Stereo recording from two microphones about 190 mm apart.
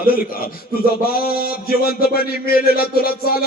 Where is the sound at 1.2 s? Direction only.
50° left (ahead or behind).